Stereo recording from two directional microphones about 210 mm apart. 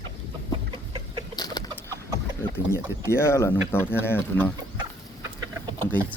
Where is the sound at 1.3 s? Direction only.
20° left (ahead or behind).